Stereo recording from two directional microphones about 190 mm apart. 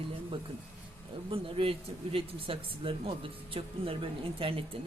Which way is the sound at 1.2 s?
30° right (ahead or behind).